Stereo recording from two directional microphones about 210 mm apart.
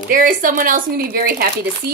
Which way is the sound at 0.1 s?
40° right (ahead or behind).